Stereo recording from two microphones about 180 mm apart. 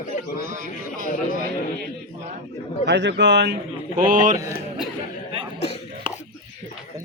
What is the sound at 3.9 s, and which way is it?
Speech, 45° right (ahead or behind).